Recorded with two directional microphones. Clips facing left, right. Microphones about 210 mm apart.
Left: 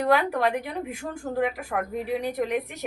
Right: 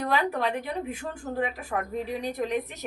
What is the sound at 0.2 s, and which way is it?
Speech, 10° left (ahead or behind).